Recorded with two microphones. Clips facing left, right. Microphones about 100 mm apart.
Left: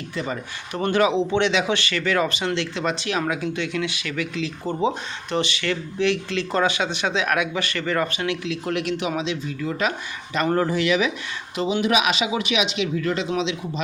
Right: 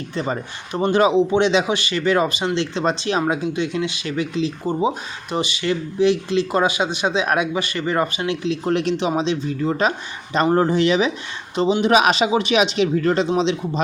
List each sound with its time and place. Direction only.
0.7 s speech: 20° right (ahead or behind)
4.6 s speech: 15° right (ahead or behind); by 13.8 s 35° right (ahead or behind)